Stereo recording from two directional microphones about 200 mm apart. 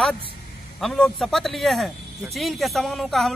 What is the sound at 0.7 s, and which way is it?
Speech, centre (ahead or behind).